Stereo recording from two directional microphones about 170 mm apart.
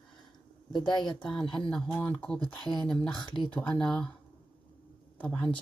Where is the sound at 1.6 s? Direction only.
5° left (ahead or behind).